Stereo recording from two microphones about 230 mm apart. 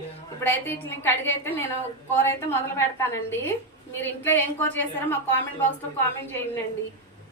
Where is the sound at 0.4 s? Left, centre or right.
Centre.